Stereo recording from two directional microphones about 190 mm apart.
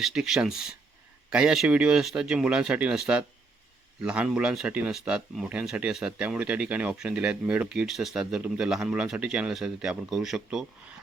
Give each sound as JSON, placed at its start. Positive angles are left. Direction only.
{"t": 0.0, "sound": "speech", "side_deg": 0}